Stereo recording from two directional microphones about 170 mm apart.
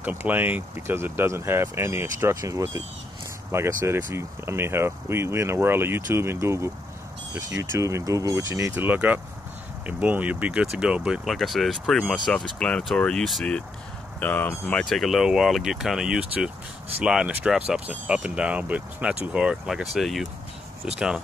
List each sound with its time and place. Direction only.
0.0 s speech: 10° right (ahead or behind)